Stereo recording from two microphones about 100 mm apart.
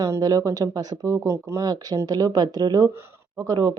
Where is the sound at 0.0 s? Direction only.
35° right (ahead or behind).